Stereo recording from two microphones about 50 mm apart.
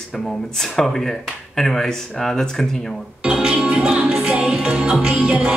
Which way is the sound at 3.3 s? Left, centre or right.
Centre.